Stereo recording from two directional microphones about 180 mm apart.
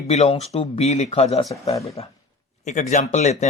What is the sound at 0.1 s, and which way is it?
Speech, 35° left (ahead or behind).